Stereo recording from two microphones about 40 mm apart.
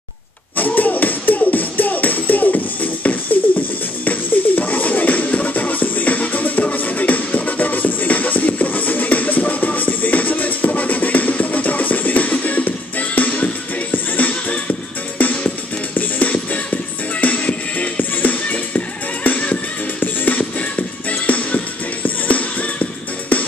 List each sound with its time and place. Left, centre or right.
0.6 s music: left